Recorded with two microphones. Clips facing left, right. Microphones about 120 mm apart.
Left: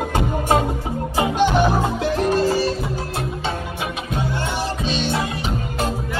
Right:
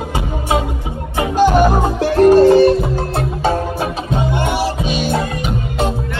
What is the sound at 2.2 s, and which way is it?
Music, 65° right (ahead or behind).